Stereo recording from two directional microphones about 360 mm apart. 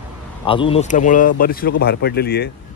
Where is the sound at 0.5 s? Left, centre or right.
Centre.